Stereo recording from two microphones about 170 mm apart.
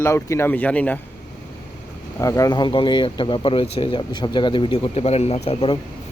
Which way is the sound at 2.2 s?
20° left (ahead or behind).